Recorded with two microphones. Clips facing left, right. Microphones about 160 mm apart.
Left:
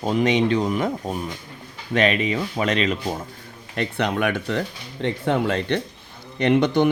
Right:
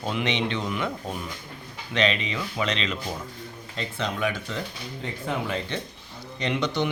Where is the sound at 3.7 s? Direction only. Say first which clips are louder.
Left 7 dB; 65° left (ahead or behind).